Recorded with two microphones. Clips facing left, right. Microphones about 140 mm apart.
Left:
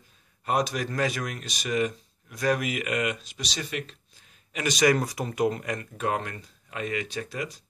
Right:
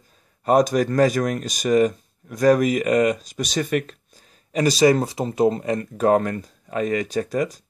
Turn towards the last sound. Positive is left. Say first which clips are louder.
# right 11 dB
turn(degrees=-45)  # may be behind; listen again after turning